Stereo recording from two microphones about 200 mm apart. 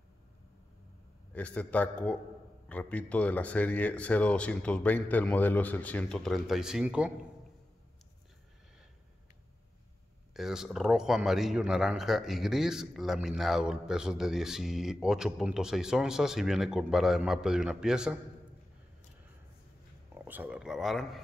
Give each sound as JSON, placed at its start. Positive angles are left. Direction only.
{"t": 1.3, "sound": "speech", "side_deg": 5}
{"t": 10.3, "sound": "a man's voice", "side_deg": 0}
{"t": 20.2, "sound": "a man's voice", "side_deg": -10}